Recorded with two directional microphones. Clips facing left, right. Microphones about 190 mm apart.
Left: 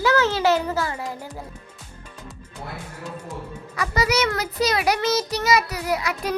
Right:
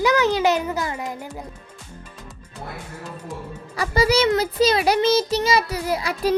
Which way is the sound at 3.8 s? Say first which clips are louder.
Right 4 dB; 30° right (ahead or behind).